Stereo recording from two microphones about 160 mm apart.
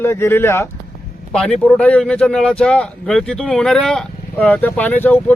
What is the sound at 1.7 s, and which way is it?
Speech, 5° left (ahead or behind).